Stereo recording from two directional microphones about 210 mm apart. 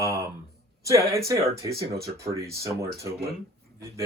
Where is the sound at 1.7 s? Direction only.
50° right (ahead or behind).